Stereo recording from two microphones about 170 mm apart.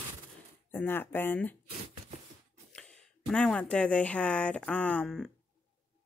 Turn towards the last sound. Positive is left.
turn(degrees=0)  # may be behind; listen again after turning